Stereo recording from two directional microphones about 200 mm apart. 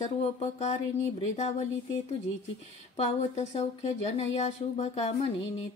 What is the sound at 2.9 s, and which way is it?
A woman's voice, 35° left (ahead or behind).